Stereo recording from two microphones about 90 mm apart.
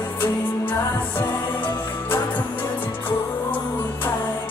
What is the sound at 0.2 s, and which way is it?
Music, 20° left (ahead or behind).